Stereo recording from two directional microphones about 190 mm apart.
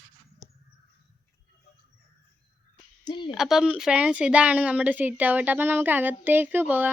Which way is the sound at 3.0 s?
25° left (ahead or behind).